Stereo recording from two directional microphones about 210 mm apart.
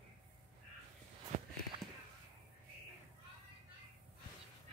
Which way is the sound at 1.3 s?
35° right (ahead or behind).